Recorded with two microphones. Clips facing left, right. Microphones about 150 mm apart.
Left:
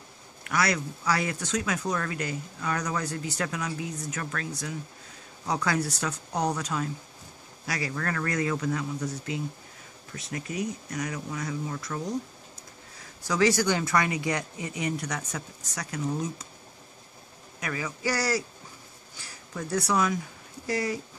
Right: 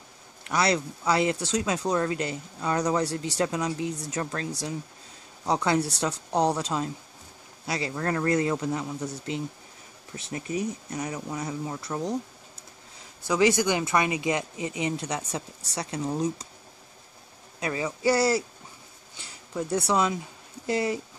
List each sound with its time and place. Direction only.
0.4 s speech: 25° right (ahead or behind)
8.6 s speech: 15° right (ahead or behind)
10.1 s speech: 30° right (ahead or behind)
13.3 s speech: 20° right (ahead or behind)
17.6 s speech: 25° right (ahead or behind)